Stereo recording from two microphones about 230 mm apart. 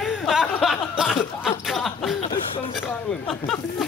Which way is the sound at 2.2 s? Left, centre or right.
Left.